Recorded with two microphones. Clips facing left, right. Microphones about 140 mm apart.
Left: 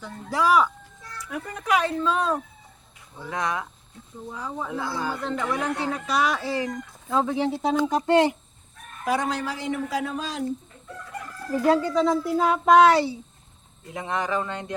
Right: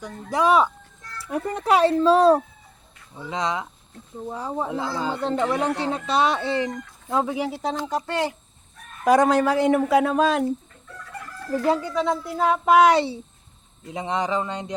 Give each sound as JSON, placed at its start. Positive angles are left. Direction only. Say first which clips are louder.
{"t": 0.0, "sound": "speech", "louder": "right 3 dB", "side_deg": -20}
{"t": 1.2, "sound": "speech", "louder": "right 7 dB", "side_deg": -35}
{"t": 3.2, "sound": "speech", "louder": "right 2 dB", "side_deg": -20}
{"t": 4.3, "sound": "speech", "louder": "right 4 dB", "side_deg": -35}
{"t": 7.9, "sound": "speech", "louder": "left 6 dB", "side_deg": 20}
{"t": 9.0, "sound": "speech", "louder": "right 9 dB", "side_deg": -50}
{"t": 11.9, "sound": "a sound", "louder": "left 2 dB", "side_deg": 0}
{"t": 12.7, "sound": "a child's voice", "louder": "even", "side_deg": -15}